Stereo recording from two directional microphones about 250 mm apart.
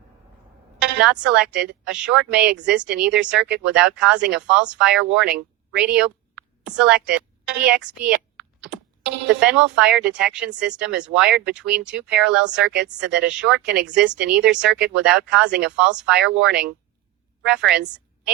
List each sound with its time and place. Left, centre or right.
0.8 s a woman's voice: centre
3.3 s speech: right
3.7 s a woman's voice: centre
7.8 s a woman's voice: right
8.4 s computer keyboard: centre
9.4 s speech: centre
12.5 s speech: right
13.1 s speech: centre